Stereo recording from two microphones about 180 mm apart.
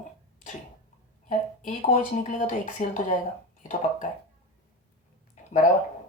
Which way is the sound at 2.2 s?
45° left (ahead or behind).